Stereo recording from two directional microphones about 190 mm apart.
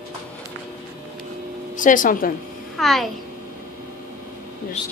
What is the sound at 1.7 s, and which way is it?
Speech, 45° left (ahead or behind).